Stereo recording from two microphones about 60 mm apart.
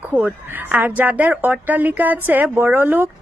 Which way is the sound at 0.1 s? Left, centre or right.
Centre.